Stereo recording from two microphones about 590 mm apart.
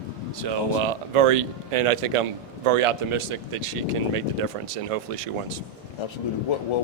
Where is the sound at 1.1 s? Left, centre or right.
Right.